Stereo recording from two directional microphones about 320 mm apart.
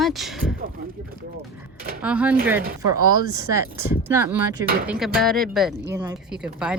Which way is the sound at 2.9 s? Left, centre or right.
Left.